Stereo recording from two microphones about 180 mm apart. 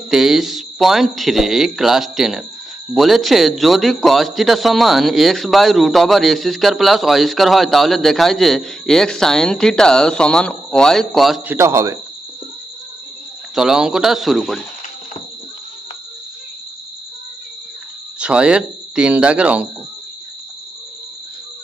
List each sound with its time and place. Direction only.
0.1 s a man's voice: centre (ahead or behind)
11.5 s speech: 15° right (ahead or behind)
13.6 s a man's voice: 5° right (ahead or behind)
18.2 s a man's voice: 5° right (ahead or behind)